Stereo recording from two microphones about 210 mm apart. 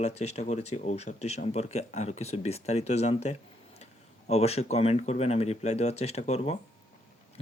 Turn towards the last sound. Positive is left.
turn(degrees=30)  # may be behind; listen again after turning